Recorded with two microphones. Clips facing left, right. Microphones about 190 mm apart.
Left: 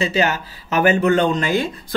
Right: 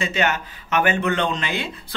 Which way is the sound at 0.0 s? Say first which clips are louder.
Left 3 dB; 35° left (ahead or behind).